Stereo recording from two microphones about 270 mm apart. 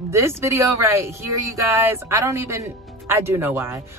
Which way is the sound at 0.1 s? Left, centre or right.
Centre.